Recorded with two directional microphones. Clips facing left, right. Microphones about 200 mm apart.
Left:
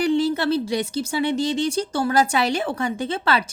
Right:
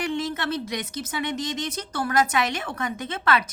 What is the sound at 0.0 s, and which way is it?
Speech, 35° left (ahead or behind).